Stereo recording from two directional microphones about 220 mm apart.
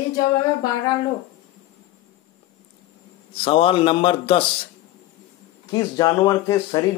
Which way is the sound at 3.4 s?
25° left (ahead or behind).